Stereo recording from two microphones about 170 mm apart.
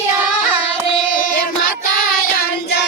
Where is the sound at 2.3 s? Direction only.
75° left (ahead or behind).